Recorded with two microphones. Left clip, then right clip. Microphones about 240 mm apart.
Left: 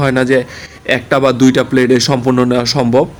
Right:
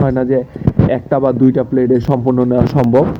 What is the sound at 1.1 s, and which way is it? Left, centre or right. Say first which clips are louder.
Speech: left 2 dB; left.